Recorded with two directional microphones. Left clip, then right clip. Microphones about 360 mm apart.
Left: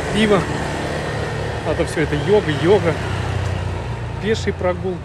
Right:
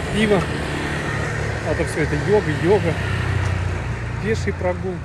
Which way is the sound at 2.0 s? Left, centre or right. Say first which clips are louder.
Left 2 dB; centre.